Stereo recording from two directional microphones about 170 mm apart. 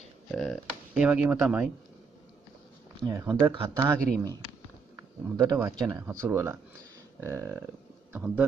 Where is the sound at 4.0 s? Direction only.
5° left (ahead or behind).